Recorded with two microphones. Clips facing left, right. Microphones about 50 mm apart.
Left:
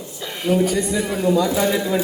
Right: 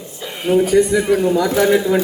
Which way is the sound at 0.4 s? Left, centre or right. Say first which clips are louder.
Right 5 dB; right.